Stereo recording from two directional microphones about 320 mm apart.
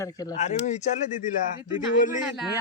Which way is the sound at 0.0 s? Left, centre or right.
Centre.